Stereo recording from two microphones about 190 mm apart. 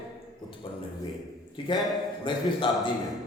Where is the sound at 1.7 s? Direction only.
25° left (ahead or behind).